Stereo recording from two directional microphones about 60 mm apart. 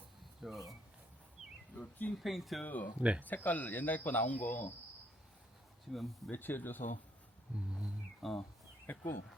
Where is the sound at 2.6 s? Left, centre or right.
Left.